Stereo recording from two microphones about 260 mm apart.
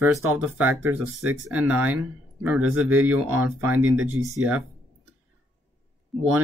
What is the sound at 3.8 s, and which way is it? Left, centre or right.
Speech, right.